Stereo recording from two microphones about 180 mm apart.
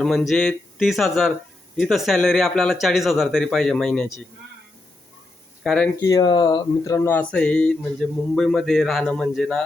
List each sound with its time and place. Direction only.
0.0 s speech: centre (ahead or behind)
5.6 s speech: 5° left (ahead or behind)
6.0 s speech: 20° left (ahead or behind); by 9.6 s centre (ahead or behind)